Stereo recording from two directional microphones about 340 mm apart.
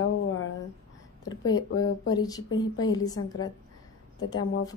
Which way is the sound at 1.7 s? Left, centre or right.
Left.